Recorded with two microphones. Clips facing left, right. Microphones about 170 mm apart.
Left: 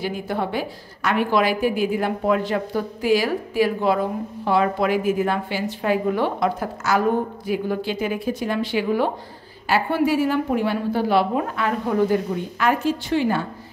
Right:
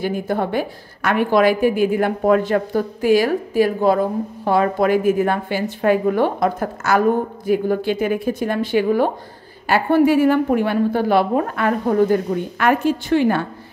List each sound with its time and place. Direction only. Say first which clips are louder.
0.0 s a woman's voice: right 4 dB; 50° right (ahead or behind)